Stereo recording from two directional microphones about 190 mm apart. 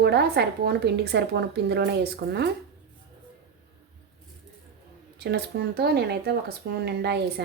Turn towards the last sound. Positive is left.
turn(degrees=-60)  # may be behind; listen again after turning